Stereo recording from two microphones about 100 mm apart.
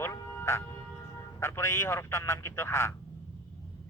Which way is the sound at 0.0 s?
25° left (ahead or behind).